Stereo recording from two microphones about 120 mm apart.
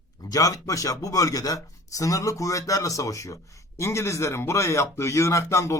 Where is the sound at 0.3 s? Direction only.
30° left (ahead or behind).